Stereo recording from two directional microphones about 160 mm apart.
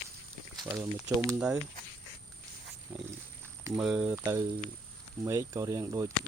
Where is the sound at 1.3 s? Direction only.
10° right (ahead or behind).